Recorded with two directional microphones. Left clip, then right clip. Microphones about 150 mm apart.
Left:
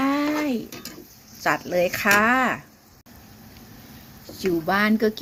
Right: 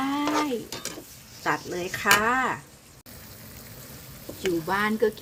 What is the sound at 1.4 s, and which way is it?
Speech, 25° left (ahead or behind).